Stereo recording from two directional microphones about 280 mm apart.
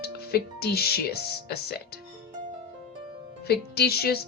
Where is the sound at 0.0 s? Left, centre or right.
Left.